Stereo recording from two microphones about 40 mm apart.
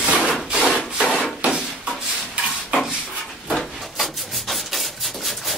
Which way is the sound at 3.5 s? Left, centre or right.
Centre.